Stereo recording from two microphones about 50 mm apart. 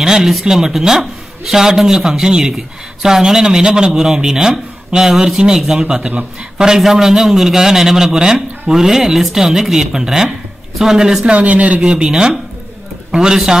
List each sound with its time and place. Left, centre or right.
0.0 s speech: centre
11.3 s speech: right
11.9 s speech: centre